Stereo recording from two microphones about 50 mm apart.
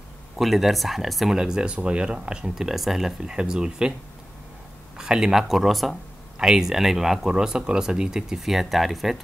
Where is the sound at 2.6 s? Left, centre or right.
Centre.